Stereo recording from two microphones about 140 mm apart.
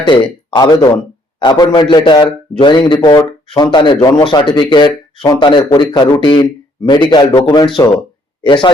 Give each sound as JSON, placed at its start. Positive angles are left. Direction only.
{"t": 0.0, "sound": "speech", "side_deg": 35}